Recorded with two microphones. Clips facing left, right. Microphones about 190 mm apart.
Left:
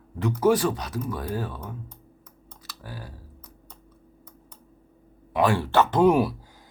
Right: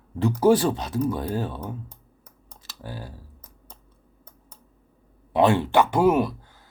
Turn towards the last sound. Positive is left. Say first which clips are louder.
# even
turn(degrees=0)  # may be behind; listen again after turning